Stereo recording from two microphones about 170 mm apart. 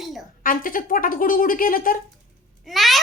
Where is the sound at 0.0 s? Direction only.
Centre (ahead or behind).